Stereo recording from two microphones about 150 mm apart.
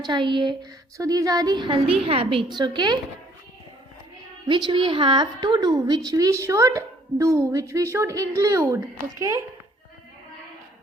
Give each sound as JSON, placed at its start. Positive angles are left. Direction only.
{"t": 0.0, "sound": "a woman's voice", "side_deg": -30}
{"t": 4.4, "sound": "a woman's voice", "side_deg": -30}